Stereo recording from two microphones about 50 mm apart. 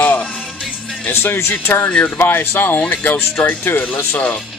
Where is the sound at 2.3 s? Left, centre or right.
Left.